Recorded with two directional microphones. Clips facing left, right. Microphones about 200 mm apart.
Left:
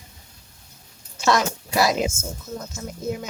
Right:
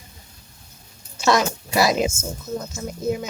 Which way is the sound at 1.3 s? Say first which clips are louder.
Right 2 dB; 10° right (ahead or behind).